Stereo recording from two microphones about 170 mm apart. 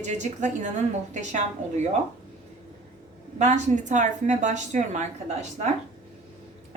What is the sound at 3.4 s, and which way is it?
A woman's voice, 45° right (ahead or behind).